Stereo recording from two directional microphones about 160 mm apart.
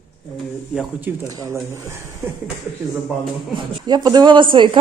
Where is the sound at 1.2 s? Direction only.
20° right (ahead or behind).